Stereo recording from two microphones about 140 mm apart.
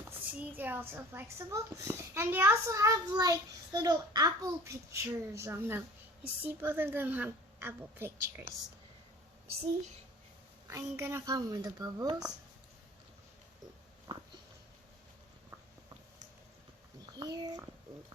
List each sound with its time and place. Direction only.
0.0 s a child's voice: 15° right (ahead or behind)
10.7 s a child's voice: 20° right (ahead or behind)
14.1 s sniff: 40° right (ahead or behind)
17.2 s a child's voice: 30° right (ahead or behind)